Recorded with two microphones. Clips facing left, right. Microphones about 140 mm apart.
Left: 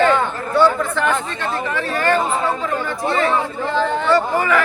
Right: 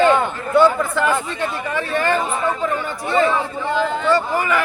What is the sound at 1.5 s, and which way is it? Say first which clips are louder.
Speech: left 1 dB; 35° left (ahead or behind).